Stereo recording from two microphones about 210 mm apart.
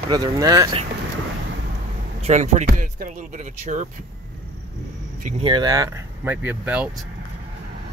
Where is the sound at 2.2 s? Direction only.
35° right (ahead or behind).